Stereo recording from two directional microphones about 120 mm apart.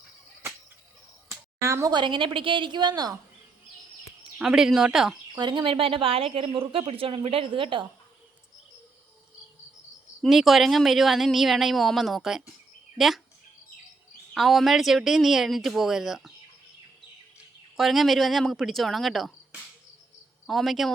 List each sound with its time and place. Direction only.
1.3 s a sound: 25° right (ahead or behind)
1.9 s a woman's voice: 40° right (ahead or behind)
4.4 s speech: 5° right (ahead or behind)
5.3 s a woman's voice: 35° right (ahead or behind)
10.2 s speech: centre (ahead or behind)
14.3 s speech: centre (ahead or behind)
17.7 s speech: centre (ahead or behind)
20.5 s speech: centre (ahead or behind)